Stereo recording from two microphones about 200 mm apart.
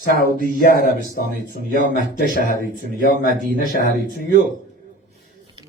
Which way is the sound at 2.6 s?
45° left (ahead or behind).